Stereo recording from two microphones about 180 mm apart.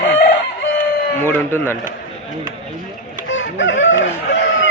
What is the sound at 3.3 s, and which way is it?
Speech, 90° left.